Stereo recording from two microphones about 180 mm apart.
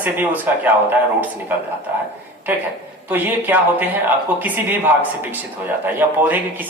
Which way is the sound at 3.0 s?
10° right (ahead or behind).